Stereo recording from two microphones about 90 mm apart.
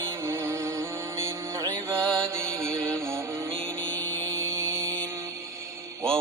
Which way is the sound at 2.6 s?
30° right (ahead or behind).